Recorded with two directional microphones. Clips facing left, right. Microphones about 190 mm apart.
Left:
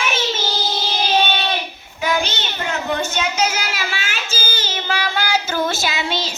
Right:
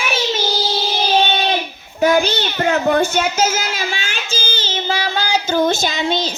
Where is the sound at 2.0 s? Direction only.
40° right (ahead or behind).